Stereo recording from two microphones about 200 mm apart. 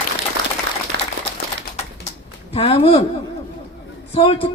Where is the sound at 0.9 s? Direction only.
60° right (ahead or behind).